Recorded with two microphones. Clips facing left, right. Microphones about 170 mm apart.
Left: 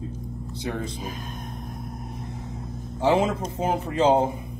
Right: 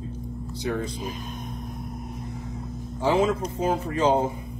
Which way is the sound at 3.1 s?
20° left (ahead or behind).